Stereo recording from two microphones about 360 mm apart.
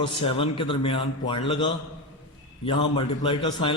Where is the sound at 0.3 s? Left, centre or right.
Centre.